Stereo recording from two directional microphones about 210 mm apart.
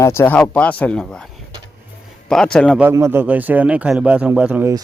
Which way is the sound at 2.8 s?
10° right (ahead or behind).